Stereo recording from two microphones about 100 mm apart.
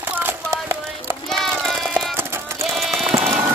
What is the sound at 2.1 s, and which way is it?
Music, 25° right (ahead or behind).